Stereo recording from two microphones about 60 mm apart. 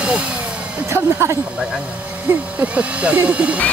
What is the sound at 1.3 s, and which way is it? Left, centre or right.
Speech, centre.